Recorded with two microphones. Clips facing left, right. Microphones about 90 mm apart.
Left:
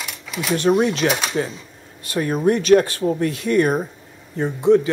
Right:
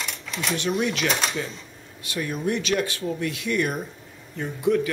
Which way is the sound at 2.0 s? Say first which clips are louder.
Left 8 dB; 40° left (ahead or behind).